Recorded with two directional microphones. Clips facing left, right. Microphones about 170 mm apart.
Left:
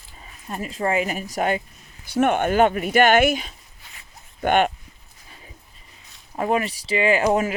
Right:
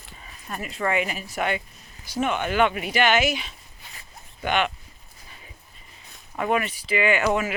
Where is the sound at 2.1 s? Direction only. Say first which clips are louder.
Left 6 dB; 55° left (ahead or behind).